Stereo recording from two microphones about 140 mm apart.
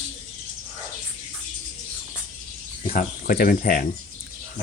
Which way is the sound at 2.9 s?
90° left.